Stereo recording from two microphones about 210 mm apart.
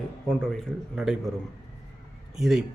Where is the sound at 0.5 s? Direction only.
Centre (ahead or behind).